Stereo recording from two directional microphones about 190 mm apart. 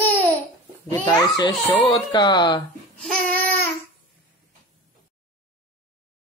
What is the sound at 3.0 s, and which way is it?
Babbling, 5° left (ahead or behind).